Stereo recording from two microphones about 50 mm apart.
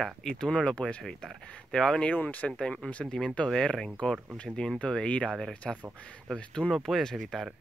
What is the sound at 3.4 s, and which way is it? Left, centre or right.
Speech, centre.